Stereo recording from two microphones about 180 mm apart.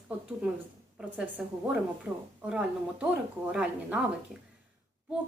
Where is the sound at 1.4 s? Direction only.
5° right (ahead or behind).